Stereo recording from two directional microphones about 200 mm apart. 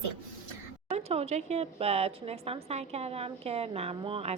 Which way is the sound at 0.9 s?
30° right (ahead or behind).